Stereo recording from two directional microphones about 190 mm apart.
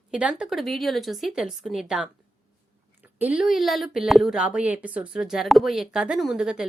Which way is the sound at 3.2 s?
5° right (ahead or behind).